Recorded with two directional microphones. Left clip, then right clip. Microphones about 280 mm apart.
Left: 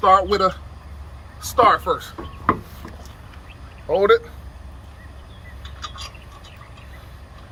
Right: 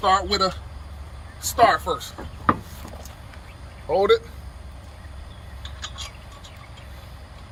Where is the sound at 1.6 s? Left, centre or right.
Centre.